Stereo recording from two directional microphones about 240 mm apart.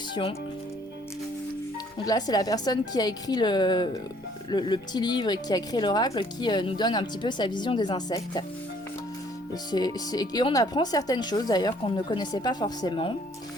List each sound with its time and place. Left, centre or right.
0.1 s speech: left
2.0 s a woman's voice: centre
9.7 s a woman's voice: centre